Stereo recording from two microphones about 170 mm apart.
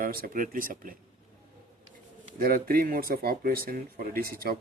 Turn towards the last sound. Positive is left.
turn(degrees=-60)  # may be behind; listen again after turning